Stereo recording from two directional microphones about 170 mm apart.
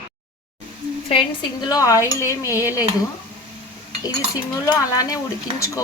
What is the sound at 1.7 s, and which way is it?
Speech, 20° left (ahead or behind).